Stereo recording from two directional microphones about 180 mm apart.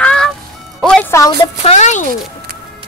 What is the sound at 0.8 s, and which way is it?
Music, centre (ahead or behind).